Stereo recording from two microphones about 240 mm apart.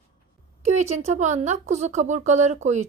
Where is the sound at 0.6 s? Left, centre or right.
Right.